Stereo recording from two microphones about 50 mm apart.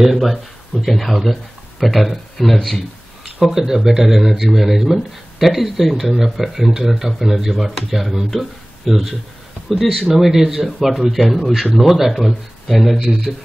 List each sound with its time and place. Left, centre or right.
0.0 s speech: centre
3.3 s speech: centre